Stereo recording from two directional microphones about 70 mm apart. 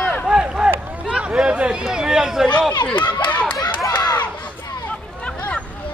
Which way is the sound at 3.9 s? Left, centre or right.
Left.